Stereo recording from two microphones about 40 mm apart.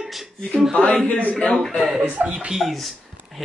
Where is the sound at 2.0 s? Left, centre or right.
Right.